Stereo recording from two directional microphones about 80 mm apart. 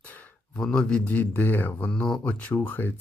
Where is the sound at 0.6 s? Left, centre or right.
Centre.